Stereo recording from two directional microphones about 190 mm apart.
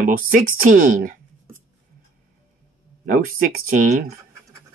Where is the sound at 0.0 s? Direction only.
45° right (ahead or behind).